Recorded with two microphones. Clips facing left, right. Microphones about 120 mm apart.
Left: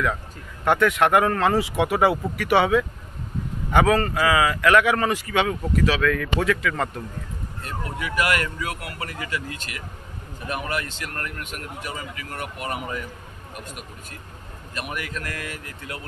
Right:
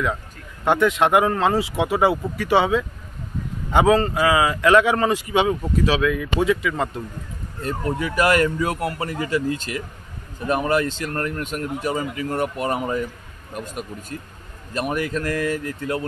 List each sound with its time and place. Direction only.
0.7 s a man's voice: 20° right (ahead or behind)
7.6 s speech: 35° right (ahead or behind)